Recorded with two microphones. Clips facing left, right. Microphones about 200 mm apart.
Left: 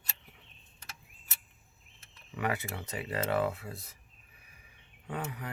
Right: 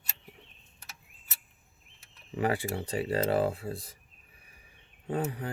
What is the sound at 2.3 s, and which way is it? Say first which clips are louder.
Speech: right 5 dB; 30° right (ahead or behind).